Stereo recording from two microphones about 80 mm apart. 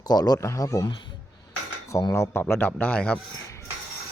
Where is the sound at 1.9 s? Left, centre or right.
Left.